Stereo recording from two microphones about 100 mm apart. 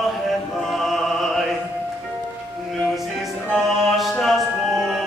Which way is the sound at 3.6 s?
Centre (ahead or behind).